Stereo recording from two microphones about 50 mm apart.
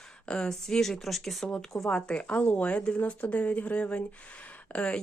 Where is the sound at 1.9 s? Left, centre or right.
Centre.